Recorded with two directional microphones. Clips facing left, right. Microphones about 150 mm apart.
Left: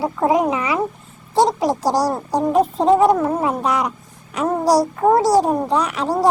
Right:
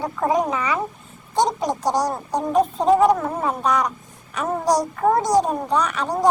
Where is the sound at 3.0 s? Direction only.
5° left (ahead or behind).